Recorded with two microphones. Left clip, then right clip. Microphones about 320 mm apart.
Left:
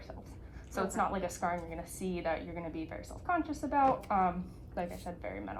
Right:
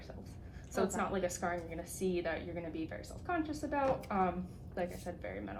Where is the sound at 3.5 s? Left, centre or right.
Centre.